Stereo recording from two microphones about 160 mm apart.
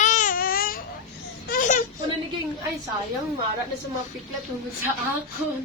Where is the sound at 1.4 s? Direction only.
55° left (ahead or behind).